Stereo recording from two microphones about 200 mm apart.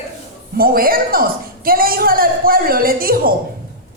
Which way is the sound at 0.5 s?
45° right (ahead or behind).